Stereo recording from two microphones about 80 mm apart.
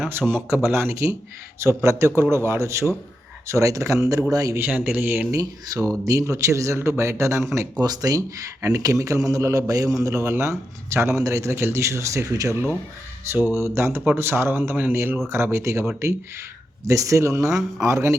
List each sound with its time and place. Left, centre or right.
0.0 s a man's voice: right
4.5 s speech: right
5.3 s a man's voice: right
7.8 s a man's voice: right
17.5 s a man's voice: centre
17.8 s speech: right